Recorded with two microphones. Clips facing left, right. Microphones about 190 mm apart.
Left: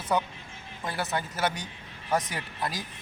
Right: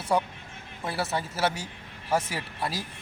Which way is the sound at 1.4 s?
30° right (ahead or behind).